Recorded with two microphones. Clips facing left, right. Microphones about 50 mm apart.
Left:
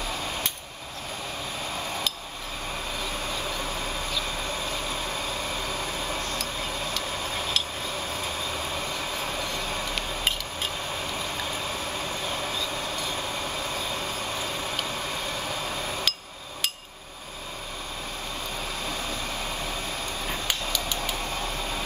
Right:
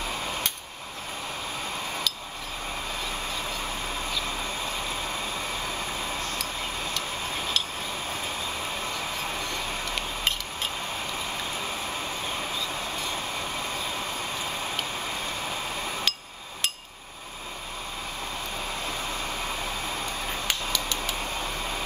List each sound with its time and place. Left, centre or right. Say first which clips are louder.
16.1 s hammer: even; centre